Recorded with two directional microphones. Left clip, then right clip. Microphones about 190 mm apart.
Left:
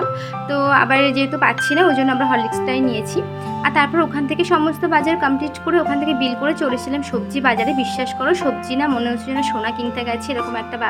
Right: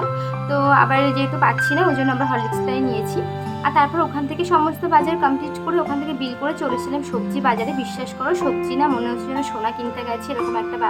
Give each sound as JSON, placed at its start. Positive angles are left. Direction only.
{"t": 0.5, "sound": "a woman's voice", "side_deg": 15}